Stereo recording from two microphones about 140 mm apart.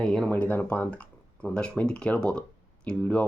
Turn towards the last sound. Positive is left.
turn(degrees=10)  # may be behind; listen again after turning